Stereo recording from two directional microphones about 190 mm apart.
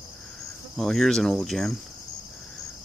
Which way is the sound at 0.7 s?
Centre (ahead or behind).